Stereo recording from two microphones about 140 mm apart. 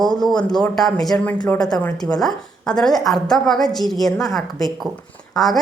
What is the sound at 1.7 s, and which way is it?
A woman's voice, 15° left (ahead or behind).